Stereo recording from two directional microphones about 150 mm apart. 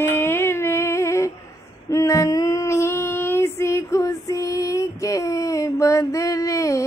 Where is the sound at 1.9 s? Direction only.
20° left (ahead or behind).